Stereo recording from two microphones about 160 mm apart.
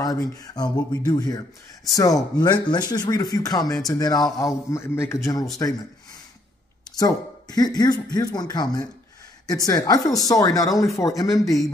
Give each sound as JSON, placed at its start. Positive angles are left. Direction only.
{"t": 0.0, "sound": "speech", "side_deg": 25}
{"t": 7.0, "sound": "speech", "side_deg": 25}